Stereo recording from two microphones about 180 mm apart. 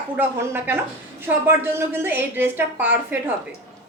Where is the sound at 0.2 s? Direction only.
10° right (ahead or behind).